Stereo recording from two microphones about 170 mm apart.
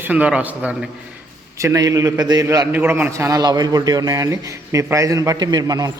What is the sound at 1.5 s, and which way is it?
A man's voice, 20° right (ahead or behind).